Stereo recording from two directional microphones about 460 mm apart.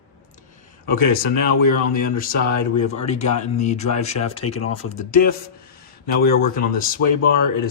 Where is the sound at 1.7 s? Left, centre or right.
Centre.